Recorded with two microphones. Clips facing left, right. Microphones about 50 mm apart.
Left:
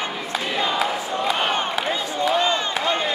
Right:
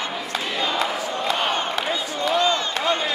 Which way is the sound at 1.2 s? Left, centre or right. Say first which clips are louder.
Left 1 dB; centre.